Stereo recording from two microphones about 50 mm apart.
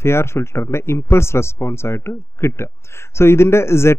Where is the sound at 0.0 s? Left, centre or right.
Left.